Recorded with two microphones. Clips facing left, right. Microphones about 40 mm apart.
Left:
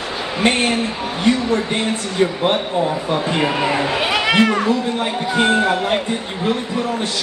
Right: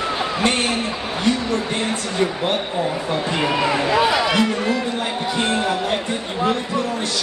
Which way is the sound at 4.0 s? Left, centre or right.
Left.